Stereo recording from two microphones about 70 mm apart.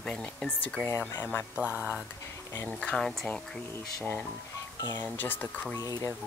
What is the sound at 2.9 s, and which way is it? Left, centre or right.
Speech, centre.